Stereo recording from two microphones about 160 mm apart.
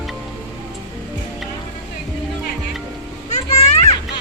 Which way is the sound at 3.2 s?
50° left (ahead or behind).